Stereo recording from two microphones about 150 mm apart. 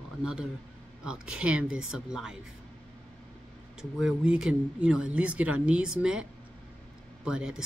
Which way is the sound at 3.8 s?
5° right (ahead or behind).